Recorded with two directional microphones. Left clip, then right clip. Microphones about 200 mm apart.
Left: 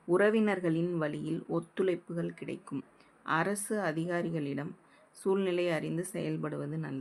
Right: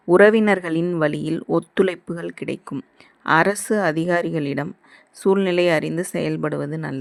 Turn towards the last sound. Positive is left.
turn(degrees=-40)  # may be behind; listen again after turning